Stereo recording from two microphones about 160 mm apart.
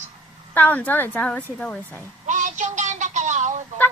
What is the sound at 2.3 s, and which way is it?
Music, 50° right (ahead or behind).